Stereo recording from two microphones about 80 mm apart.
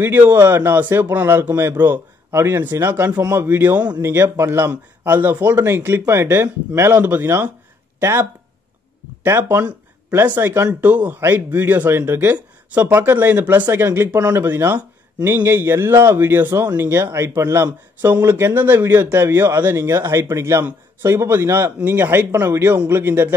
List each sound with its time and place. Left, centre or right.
0.0 s speech: right
4.0 s a man's voice: right